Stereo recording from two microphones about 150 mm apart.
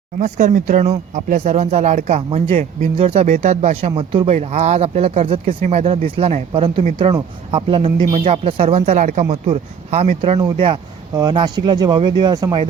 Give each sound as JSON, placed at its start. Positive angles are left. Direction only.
{"t": 0.2, "sound": "speech", "side_deg": -55}
{"t": 4.4, "sound": "speech", "side_deg": -50}
{"t": 5.5, "sound": "speech", "side_deg": -50}